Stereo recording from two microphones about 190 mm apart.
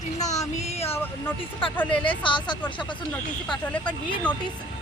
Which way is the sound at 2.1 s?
25° left (ahead or behind).